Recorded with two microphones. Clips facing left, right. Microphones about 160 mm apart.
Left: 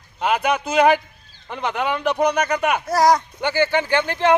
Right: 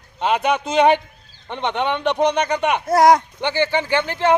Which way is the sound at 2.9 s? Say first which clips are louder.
Right 4 dB; 55° right (ahead or behind).